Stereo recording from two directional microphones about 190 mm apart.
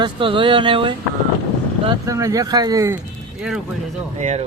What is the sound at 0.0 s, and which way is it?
Speech, 25° right (ahead or behind).